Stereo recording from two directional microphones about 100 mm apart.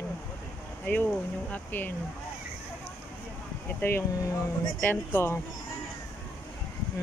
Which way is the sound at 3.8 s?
30° left (ahead or behind).